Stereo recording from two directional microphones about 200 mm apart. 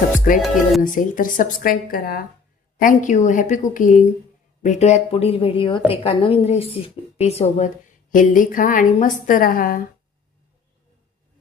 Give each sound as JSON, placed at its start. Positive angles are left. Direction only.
{"t": 0.3, "sound": "a woman's voice", "side_deg": 40}